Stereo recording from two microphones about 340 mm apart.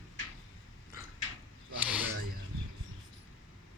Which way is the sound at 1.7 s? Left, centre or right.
Centre.